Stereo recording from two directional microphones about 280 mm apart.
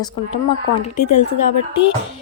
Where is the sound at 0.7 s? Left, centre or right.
Left.